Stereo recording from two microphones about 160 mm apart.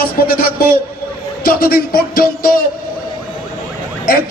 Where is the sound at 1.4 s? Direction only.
65° left (ahead or behind).